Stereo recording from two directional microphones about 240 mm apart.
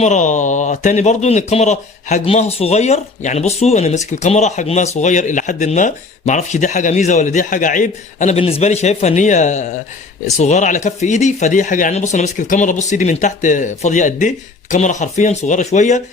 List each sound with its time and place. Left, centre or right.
0.0 s speech: left